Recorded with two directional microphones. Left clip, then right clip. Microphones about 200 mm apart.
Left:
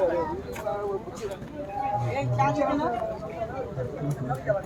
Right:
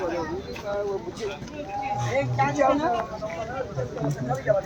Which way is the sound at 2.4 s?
30° right (ahead or behind).